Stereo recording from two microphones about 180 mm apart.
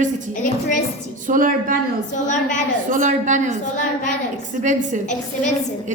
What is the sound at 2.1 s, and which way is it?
Speech, 45° left (ahead or behind).